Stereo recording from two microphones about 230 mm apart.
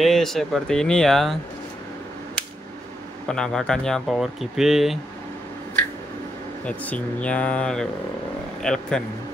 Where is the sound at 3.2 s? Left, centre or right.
Centre.